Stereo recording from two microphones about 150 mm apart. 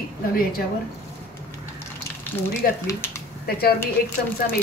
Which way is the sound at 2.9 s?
20° left (ahead or behind).